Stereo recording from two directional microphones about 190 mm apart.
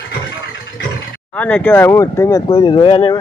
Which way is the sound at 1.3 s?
10° left (ahead or behind).